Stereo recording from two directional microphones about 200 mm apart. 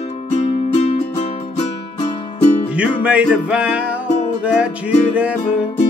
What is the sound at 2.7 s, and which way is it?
Music, 5° right (ahead or behind).